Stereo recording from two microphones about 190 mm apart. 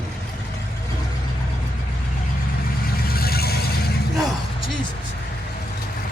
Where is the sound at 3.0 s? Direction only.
55° left (ahead or behind).